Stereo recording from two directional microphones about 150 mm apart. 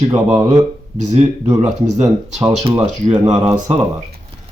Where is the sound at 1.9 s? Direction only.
50° right (ahead or behind).